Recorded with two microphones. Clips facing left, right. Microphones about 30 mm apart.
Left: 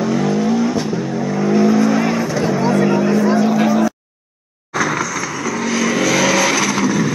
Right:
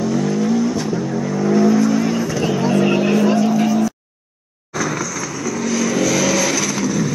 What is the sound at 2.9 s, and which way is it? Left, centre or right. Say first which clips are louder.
Vehicle: left 1 dB; right.